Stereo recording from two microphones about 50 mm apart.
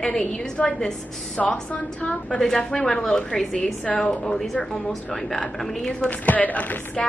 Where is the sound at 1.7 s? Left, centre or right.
Left.